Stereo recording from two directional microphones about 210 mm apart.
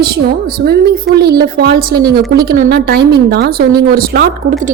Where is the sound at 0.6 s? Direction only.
50° right (ahead or behind).